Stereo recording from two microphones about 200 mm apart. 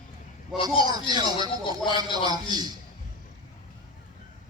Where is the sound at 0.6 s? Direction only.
20° right (ahead or behind).